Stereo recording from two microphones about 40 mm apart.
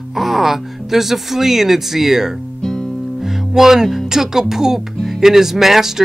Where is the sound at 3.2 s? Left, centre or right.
Centre.